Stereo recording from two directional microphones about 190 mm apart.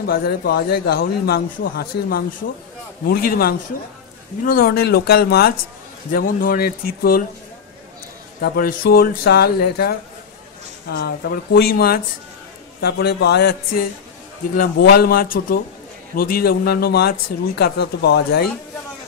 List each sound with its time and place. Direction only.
0.0 s speech: 55° left (ahead or behind)
8.4 s speech: 50° left (ahead or behind)